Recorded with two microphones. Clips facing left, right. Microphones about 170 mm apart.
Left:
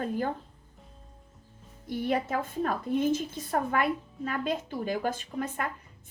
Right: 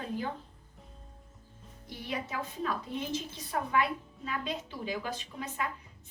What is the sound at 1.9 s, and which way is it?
A woman's voice, 50° left (ahead or behind).